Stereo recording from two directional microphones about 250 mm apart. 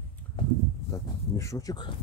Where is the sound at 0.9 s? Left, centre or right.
Centre.